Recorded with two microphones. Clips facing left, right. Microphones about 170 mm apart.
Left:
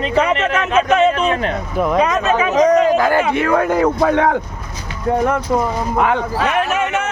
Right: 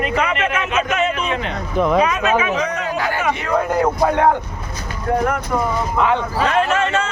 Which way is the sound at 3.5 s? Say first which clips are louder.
Even; 80° left.